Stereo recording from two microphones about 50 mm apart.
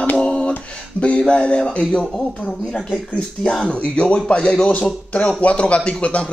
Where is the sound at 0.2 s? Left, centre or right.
Left.